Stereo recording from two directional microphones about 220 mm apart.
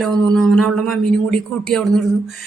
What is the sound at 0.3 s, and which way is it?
Speech, centre (ahead or behind).